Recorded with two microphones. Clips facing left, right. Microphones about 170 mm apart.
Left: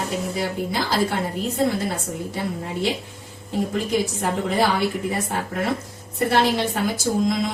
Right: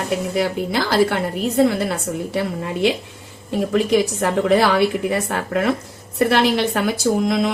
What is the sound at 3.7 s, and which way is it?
A woman's voice, 90° right.